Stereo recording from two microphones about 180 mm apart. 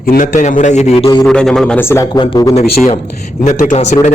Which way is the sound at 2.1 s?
25° left (ahead or behind).